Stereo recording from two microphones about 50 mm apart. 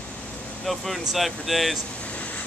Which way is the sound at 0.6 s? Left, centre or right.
Centre.